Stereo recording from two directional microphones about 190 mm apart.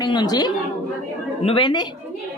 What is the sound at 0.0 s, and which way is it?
A child's voice, 25° left (ahead or behind).